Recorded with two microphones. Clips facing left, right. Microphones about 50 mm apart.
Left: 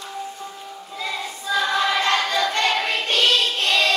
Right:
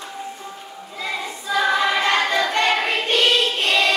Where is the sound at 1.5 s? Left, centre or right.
Centre.